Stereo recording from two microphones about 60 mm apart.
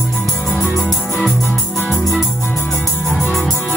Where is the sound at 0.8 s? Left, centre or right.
Centre.